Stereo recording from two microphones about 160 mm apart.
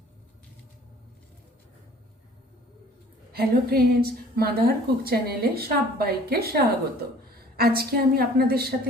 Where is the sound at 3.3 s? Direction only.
70° right (ahead or behind).